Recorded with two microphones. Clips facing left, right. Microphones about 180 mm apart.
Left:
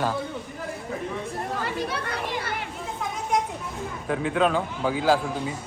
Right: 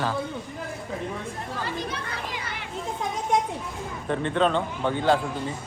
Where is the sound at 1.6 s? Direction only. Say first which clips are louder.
Left 2 dB; 65° left (ahead or behind).